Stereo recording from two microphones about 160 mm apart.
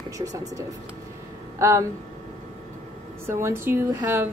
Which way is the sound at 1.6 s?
15° right (ahead or behind).